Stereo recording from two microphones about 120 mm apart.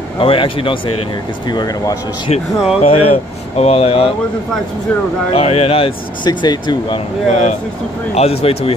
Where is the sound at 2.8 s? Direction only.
55° left (ahead or behind).